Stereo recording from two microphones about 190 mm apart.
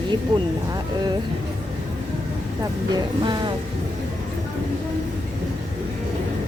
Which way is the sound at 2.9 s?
25° right (ahead or behind).